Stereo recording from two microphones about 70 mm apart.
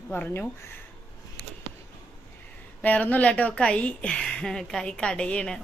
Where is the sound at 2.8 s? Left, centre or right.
Left.